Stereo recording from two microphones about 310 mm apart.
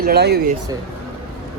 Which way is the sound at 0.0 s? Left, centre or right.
Right.